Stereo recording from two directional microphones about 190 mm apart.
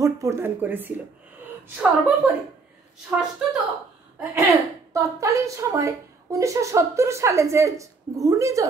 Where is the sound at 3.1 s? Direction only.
10° right (ahead or behind).